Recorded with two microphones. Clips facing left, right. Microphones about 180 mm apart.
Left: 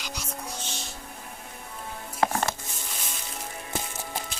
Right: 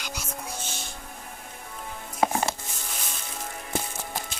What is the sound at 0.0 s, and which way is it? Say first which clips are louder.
Music: even; 5° right (ahead or behind).